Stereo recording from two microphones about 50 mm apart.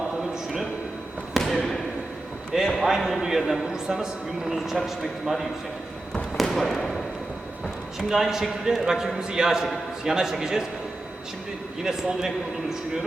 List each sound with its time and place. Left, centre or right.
1.4 s basketball bounce: centre
2.5 s a man's voice: centre
6.3 s basketball bounce: centre
7.9 s a man's voice: centre
11.8 s a man's voice: centre